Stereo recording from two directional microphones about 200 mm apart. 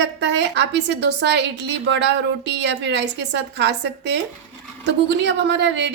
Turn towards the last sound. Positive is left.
turn(degrees=-60)  # may be behind; listen again after turning